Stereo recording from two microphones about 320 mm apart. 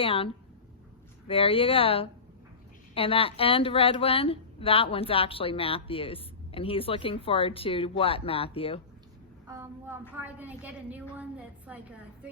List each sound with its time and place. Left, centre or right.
0.0 s a woman's voice: centre
9.5 s a woman's voice: centre